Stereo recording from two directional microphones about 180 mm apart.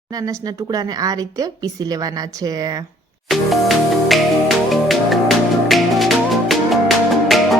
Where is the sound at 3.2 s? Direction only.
Centre (ahead or behind).